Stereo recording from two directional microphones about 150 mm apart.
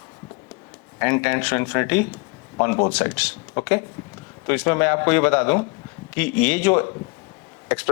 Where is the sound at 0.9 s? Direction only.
10° left (ahead or behind).